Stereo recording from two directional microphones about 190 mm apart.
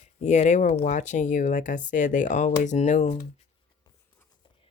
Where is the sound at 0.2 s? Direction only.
35° left (ahead or behind).